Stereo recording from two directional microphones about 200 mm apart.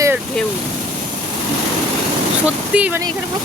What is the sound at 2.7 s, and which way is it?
Speech, 5° right (ahead or behind).